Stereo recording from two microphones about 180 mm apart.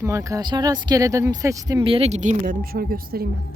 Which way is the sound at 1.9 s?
35° right (ahead or behind).